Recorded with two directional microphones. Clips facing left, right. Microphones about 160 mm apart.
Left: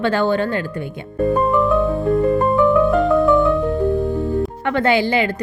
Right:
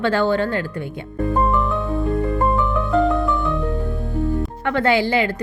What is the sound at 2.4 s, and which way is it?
Music, 20° right (ahead or behind).